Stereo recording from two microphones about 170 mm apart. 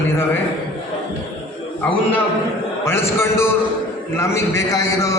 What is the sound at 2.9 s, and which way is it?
A man's voice, 15° left (ahead or behind).